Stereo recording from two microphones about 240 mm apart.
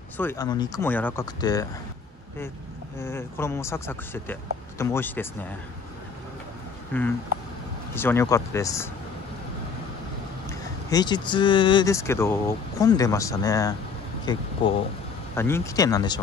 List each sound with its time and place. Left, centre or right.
0.2 s speech: centre
3.0 s speech: centre
6.9 s speech: centre
10.9 s speech: centre